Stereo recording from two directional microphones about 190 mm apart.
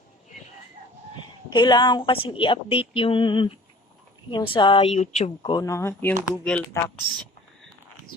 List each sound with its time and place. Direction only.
1.5 s speech: 25° left (ahead or behind)
5.4 s speech: 20° left (ahead or behind)